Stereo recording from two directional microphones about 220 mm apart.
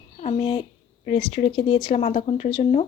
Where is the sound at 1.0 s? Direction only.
25° left (ahead or behind).